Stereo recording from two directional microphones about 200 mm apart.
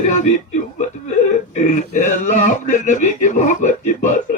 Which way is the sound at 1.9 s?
40° left (ahead or behind).